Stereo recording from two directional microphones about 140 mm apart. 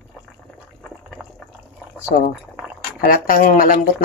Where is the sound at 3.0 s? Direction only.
90° left; by 3.8 s 70° left (ahead or behind).